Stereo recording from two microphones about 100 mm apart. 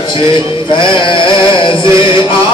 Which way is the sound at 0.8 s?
55° left (ahead or behind).